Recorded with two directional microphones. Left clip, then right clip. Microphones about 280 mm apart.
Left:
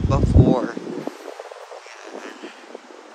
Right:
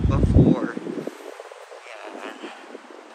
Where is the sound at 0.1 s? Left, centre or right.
Centre.